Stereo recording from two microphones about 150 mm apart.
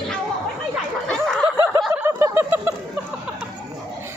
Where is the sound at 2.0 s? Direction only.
15° right (ahead or behind).